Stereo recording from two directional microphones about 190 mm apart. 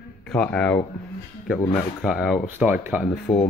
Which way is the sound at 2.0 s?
Centre (ahead or behind).